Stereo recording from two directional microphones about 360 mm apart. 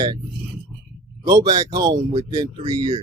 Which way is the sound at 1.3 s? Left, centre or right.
Centre.